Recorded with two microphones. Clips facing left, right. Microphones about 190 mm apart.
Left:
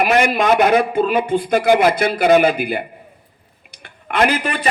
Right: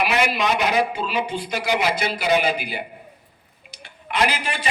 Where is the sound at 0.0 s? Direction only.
50° left (ahead or behind).